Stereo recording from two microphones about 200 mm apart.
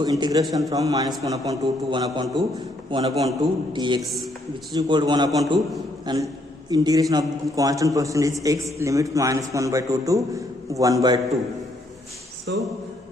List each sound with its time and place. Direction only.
0.0 s a man's voice: 20° right (ahead or behind)
12.5 s a man's voice: 60° right (ahead or behind)